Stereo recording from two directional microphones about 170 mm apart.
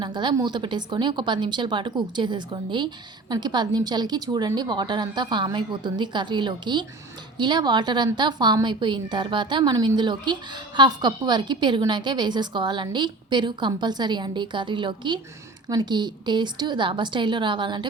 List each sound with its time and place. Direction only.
0.0 s a woman's voice: 25° right (ahead or behind)